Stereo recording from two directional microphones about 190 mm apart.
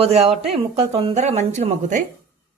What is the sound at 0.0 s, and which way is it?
A woman's voice, 30° right (ahead or behind).